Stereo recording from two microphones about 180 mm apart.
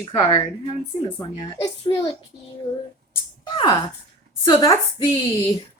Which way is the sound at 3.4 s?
25° left (ahead or behind).